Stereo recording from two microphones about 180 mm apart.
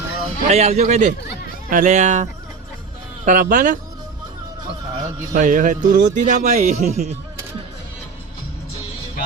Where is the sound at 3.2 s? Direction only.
45° right (ahead or behind).